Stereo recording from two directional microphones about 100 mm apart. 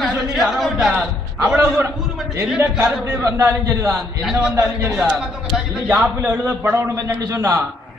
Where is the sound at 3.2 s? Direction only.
30° right (ahead or behind).